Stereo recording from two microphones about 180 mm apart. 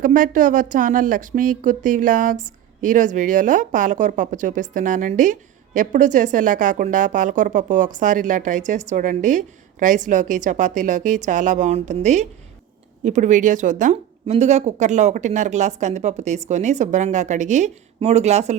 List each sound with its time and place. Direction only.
0.0 s a woman's voice: 45° right (ahead or behind)